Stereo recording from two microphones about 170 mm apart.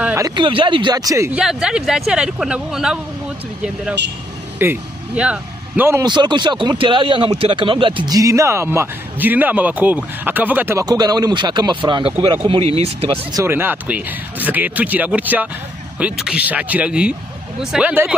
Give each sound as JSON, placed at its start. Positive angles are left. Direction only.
{"t": 0.0, "sound": "a sound", "side_deg": -15}
{"t": 0.4, "sound": "speech", "side_deg": -30}
{"t": 1.3, "sound": "speech", "side_deg": -5}
{"t": 4.6, "sound": "speech", "side_deg": -10}
{"t": 6.0, "sound": "speech", "side_deg": -25}
{"t": 13.3, "sound": "speech", "side_deg": -15}